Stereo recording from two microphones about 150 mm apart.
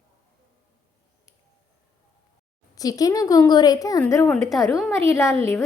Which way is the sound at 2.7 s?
25° left (ahead or behind).